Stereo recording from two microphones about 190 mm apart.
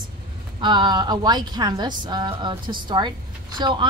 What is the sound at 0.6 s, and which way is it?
A woman's voice, 25° right (ahead or behind).